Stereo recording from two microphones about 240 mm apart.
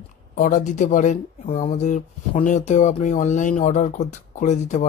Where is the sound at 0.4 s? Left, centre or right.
Left.